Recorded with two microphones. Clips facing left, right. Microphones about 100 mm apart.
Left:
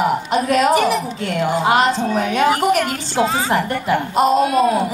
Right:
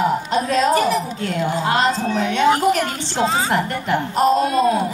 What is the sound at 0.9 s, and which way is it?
Speech, 75° left (ahead or behind).